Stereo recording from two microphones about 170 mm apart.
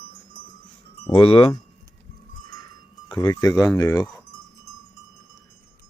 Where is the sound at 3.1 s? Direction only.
20° left (ahead or behind).